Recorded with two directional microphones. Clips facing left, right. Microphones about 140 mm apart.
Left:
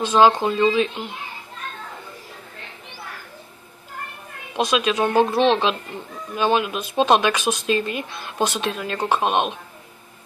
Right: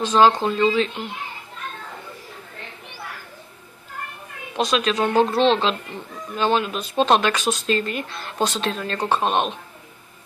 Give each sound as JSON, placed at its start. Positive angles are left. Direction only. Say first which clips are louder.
{"t": 0.0, "sound": "speech", "louder": "left 1 dB", "side_deg": 15}
{"t": 4.6, "sound": "speech", "louder": "left 1 dB", "side_deg": 15}